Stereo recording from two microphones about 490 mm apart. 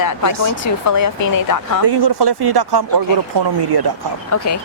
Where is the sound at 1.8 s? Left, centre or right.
Right.